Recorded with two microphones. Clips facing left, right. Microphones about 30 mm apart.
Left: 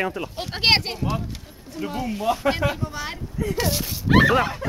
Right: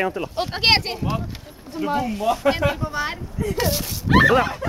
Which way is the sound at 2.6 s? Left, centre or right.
Centre.